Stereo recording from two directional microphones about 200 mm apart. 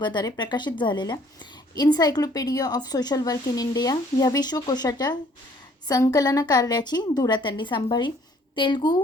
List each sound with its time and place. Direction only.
0.0 s a woman's voice: 20° left (ahead or behind)